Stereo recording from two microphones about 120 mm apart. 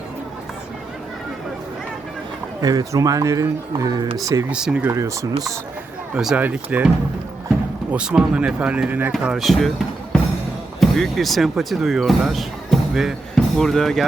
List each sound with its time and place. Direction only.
2.6 s speech: 30° right (ahead or behind)
4.5 s speech: 10° right (ahead or behind)
4.9 s speech: 25° right (ahead or behind)
6.1 s speech: 10° right (ahead or behind)
7.9 s speech: 10° right (ahead or behind)
9.2 s speech: centre (ahead or behind)